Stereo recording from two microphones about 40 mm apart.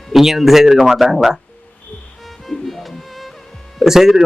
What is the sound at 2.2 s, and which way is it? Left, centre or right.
Music, centre.